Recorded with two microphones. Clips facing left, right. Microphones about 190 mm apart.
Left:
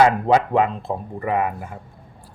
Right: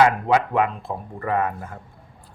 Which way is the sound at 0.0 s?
25° left (ahead or behind).